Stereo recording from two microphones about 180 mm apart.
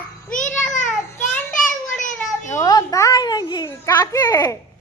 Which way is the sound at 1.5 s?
45° left (ahead or behind).